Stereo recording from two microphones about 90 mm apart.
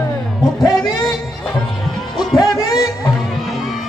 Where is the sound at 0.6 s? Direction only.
45° left (ahead or behind).